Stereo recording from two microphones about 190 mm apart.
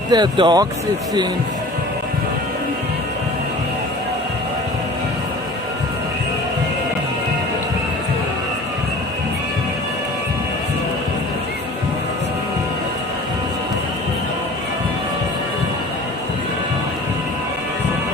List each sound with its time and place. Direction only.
0.1 s speech: 25° right (ahead or behind)